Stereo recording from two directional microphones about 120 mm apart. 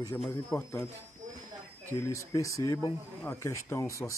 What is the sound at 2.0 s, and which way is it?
Speech, 25° left (ahead or behind).